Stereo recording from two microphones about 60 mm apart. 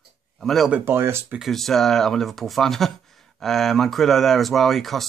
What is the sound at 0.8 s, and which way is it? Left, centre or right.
Speech, right.